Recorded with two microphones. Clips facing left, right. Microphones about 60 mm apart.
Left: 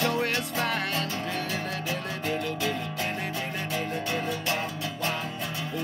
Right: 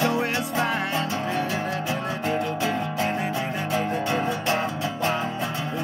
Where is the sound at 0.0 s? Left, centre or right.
Centre.